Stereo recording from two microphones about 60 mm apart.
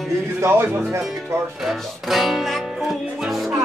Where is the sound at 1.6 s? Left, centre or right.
Centre.